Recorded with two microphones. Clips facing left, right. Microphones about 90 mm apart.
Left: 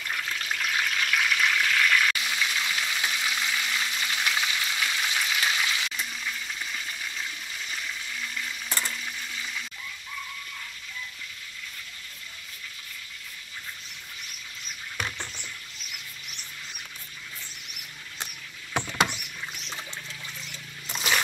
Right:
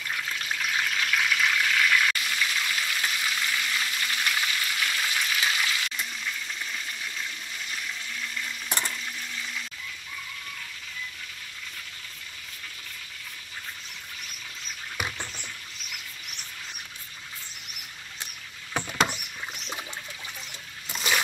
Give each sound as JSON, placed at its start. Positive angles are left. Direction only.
{"t": 0.0, "sound": "water", "side_deg": 0}
{"t": 2.1, "sound": "water", "side_deg": 15}
{"t": 2.6, "sound": "frying", "side_deg": 15}
{"t": 5.9, "sound": "toilet flush", "side_deg": 0}
{"t": 8.6, "sound": "frying", "side_deg": -15}
{"t": 15.0, "sound": "rodents", "side_deg": -10}